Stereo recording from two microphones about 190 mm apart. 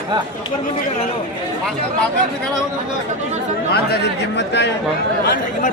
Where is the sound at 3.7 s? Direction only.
60° left (ahead or behind).